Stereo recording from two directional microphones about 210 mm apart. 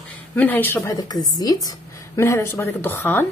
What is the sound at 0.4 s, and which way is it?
A woman's voice, 10° left (ahead or behind).